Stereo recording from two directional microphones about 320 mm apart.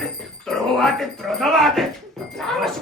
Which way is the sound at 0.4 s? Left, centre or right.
Centre.